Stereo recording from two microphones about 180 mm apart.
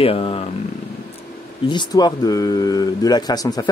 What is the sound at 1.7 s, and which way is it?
Speech, 25° left (ahead or behind).